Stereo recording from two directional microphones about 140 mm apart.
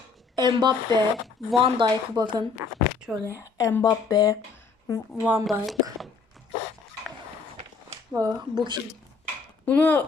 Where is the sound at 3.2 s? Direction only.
20° left (ahead or behind).